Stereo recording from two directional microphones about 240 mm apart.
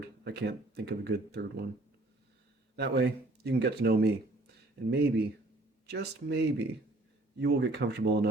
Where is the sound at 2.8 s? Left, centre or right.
Right.